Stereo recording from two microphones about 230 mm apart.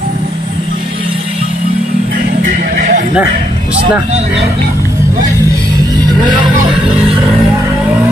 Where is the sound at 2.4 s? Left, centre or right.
Right.